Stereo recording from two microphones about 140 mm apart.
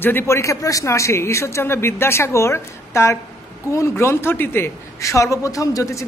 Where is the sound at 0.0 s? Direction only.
15° left (ahead or behind).